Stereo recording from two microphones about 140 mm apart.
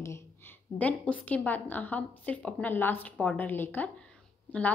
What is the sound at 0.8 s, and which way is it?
A woman's voice, 10° left (ahead or behind).